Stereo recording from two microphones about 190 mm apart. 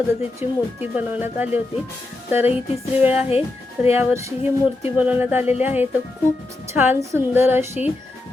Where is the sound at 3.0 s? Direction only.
10° right (ahead or behind).